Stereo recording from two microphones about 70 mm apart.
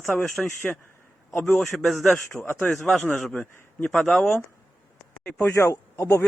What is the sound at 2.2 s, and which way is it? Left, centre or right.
Speech, left.